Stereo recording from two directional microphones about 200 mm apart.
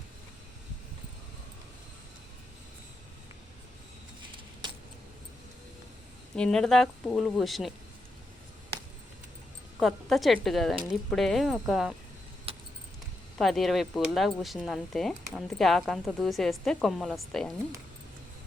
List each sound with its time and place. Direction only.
6.3 s speech: 5° left (ahead or behind)
9.8 s speech: centre (ahead or behind)
12.5 s keys jangling: 30° right (ahead or behind)
13.4 s speech: centre (ahead or behind)